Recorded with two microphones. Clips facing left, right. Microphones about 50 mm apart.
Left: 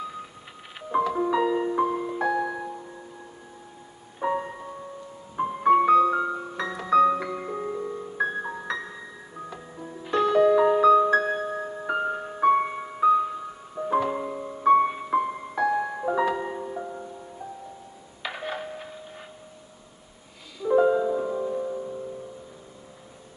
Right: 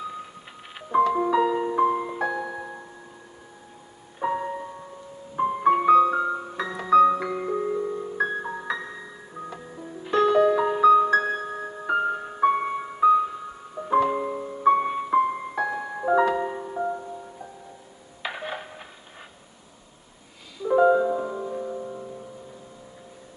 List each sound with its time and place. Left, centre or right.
0.7 s music: centre
1.9 s music: centre
2.1 s music: centre
2.4 s music: centre
4.2 s music: centre
18.2 s music: centre
20.6 s music: centre